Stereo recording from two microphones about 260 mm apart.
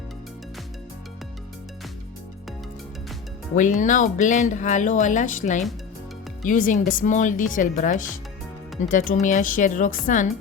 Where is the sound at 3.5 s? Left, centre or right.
Left.